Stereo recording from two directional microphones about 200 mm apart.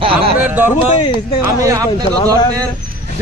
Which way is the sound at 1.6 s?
15° right (ahead or behind).